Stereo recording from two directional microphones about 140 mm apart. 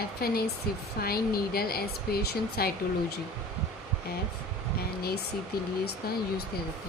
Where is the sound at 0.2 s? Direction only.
90° left.